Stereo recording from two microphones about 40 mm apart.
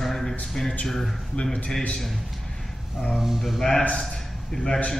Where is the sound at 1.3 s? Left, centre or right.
Centre.